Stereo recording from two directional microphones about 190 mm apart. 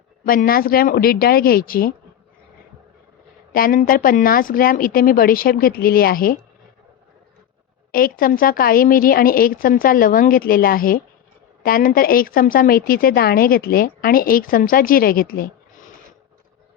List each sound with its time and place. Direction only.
0.3 s a woman's voice: 50° left (ahead or behind)
3.5 s a woman's voice: 45° left (ahead or behind)
7.9 s a woman's voice: 50° left (ahead or behind)